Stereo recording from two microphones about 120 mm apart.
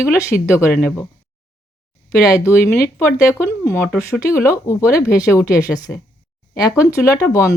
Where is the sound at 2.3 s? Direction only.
25° left (ahead or behind).